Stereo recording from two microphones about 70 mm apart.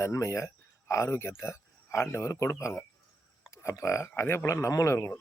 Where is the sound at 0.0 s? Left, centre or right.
Left.